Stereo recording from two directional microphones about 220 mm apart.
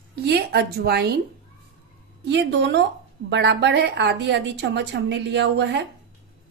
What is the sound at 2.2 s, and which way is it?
A woman's voice, 55° right (ahead or behind).